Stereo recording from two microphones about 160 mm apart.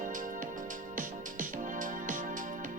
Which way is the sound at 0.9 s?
55° right (ahead or behind).